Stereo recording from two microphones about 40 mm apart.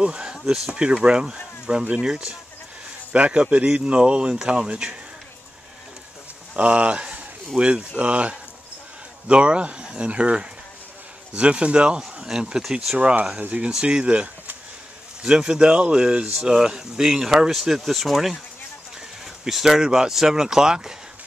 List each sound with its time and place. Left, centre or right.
0.0 s a sound: right
0.7 s speech: right
6.5 s speech: right; by 18.4 s centre
19.4 s speech: centre